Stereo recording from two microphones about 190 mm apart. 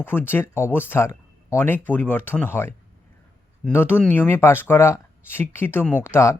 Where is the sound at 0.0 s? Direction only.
10° left (ahead or behind).